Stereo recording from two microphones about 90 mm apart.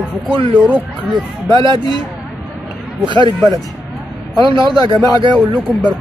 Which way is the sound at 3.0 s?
65° right (ahead or behind).